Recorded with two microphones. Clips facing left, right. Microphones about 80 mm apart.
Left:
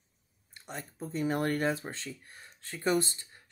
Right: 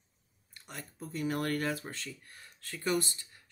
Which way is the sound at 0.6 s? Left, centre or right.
Left.